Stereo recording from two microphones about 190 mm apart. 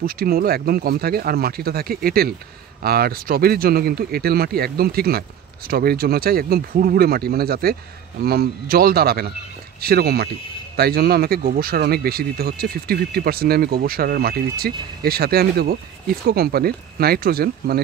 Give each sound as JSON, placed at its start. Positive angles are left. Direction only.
{"t": 0.0, "sound": "speech", "side_deg": -50}